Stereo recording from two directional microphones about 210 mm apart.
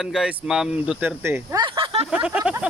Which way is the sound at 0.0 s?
Centre (ahead or behind).